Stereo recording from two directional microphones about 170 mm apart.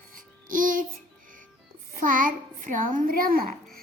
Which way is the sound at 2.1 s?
50° right (ahead or behind).